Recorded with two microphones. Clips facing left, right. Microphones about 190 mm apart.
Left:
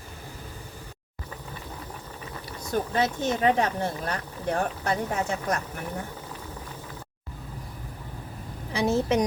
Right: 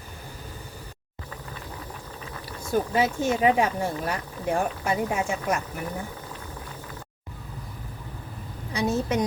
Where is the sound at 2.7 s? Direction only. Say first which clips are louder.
Right 2 dB; 10° right (ahead or behind).